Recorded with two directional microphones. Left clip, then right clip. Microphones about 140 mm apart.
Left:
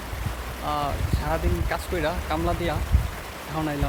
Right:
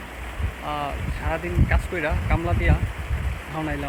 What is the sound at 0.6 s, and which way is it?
Speech, 15° left (ahead or behind).